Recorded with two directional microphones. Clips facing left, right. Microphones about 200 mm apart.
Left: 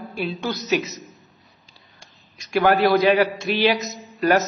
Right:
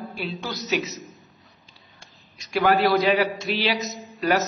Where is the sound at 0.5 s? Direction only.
Centre (ahead or behind).